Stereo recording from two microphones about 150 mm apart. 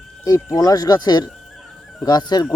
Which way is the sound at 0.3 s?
25° left (ahead or behind).